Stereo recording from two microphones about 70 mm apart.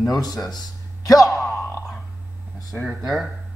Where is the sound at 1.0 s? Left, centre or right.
Left.